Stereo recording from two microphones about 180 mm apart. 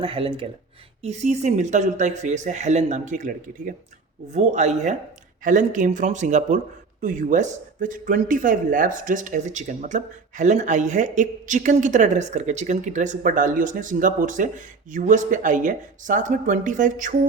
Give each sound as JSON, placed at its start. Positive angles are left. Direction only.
{"t": 0.0, "sound": "speech", "side_deg": -30}